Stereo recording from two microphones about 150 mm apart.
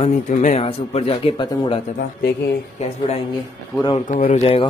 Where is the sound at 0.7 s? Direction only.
40° left (ahead or behind).